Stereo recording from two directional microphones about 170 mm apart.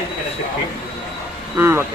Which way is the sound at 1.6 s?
15° right (ahead or behind).